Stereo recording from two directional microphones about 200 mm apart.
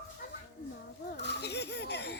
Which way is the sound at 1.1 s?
60° left (ahead or behind).